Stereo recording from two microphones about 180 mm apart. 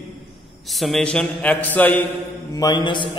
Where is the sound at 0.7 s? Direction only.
Centre (ahead or behind).